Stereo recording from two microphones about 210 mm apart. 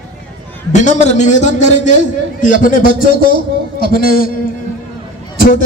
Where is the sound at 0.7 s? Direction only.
35° left (ahead or behind).